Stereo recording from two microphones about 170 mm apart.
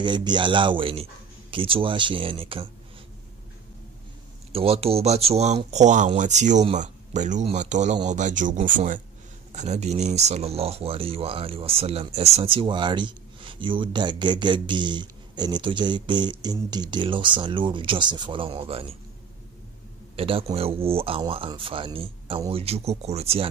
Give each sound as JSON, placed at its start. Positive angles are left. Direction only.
{"t": 0.0, "sound": "speech", "side_deg": -25}
{"t": 4.5, "sound": "speech", "side_deg": -35}
{"t": 20.2, "sound": "speech", "side_deg": -35}